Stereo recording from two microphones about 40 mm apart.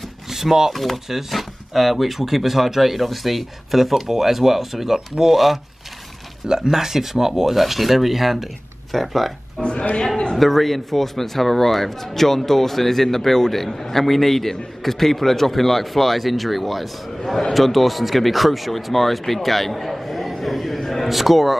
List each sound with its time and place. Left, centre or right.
0.3 s speech: centre
6.4 s speech: centre
9.6 s a woman's voice: left
10.3 s speech: centre